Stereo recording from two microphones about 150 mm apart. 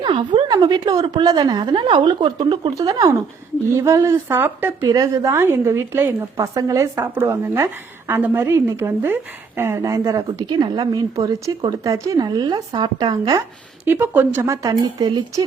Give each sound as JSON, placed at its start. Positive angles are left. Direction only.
{"t": 0.0, "sound": "a woman's voice", "side_deg": -30}
{"t": 13.8, "sound": "a woman's voice", "side_deg": -15}